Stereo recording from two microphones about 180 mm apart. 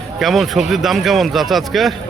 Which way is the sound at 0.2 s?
Centre (ahead or behind).